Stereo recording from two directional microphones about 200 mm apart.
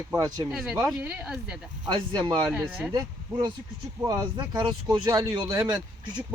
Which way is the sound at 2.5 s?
5° right (ahead or behind).